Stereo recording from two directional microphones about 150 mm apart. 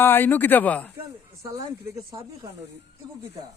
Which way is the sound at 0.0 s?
15° left (ahead or behind).